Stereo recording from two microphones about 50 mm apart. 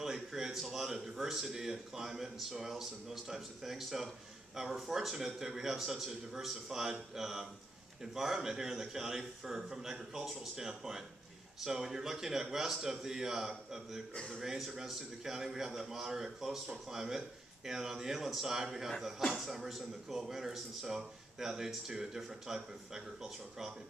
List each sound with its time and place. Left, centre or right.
0.0 s a man's voice: centre
14.1 s a man's voice: centre
14.4 s a man's voice: centre